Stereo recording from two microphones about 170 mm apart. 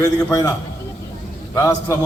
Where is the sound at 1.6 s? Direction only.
15° left (ahead or behind).